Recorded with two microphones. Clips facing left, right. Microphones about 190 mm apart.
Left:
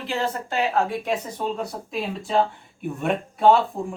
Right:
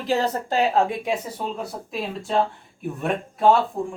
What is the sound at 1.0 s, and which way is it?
Speech, 10° right (ahead or behind).